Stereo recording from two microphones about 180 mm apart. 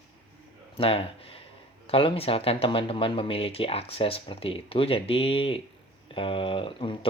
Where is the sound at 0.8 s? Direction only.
30° left (ahead or behind).